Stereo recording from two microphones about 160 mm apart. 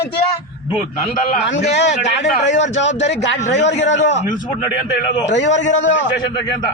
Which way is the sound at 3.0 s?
90° left.